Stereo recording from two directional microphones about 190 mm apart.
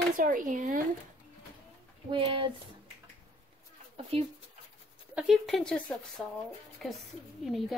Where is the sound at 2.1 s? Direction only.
25° right (ahead or behind).